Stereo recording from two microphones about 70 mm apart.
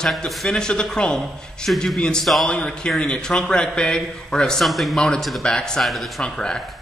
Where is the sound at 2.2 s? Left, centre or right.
Centre.